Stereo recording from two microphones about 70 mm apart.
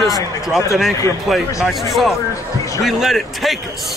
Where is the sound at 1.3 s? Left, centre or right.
Centre.